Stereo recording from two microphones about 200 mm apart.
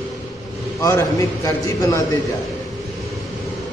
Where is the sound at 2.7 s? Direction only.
Centre (ahead or behind).